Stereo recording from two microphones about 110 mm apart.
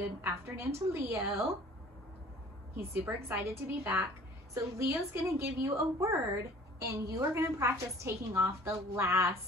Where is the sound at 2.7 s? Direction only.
20° right (ahead or behind).